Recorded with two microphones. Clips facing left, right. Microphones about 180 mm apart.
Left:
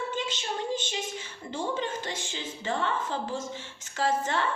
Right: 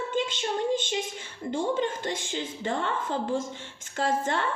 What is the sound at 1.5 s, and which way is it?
A woman's voice, 50° right (ahead or behind).